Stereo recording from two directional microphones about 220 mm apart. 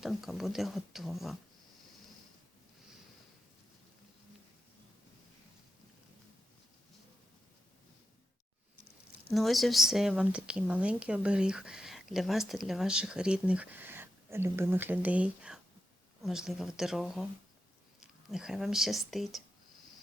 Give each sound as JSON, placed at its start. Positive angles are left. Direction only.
{"t": 0.0, "sound": "speech", "side_deg": 0}
{"t": 9.3, "sound": "speech", "side_deg": 0}
{"t": 18.3, "sound": "speech", "side_deg": 0}